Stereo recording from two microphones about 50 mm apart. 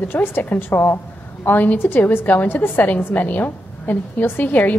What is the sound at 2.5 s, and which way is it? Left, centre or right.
A woman's voice, left.